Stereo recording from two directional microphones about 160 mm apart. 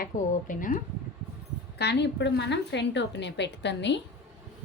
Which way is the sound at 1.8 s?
90° left.